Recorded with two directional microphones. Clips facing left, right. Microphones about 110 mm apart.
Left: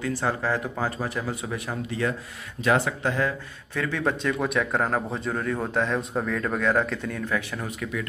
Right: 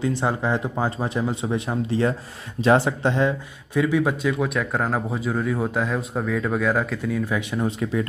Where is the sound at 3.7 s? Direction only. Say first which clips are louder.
Right 6 dB; 10° right (ahead or behind).